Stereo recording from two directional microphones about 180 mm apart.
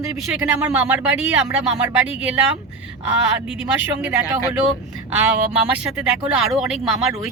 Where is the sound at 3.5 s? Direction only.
10° right (ahead or behind).